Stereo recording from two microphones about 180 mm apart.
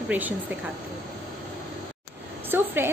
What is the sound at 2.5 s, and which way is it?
Speech, 10° right (ahead or behind).